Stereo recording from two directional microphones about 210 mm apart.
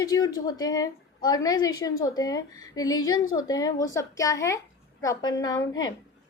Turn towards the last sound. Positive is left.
turn(degrees=20)  # may be behind; listen again after turning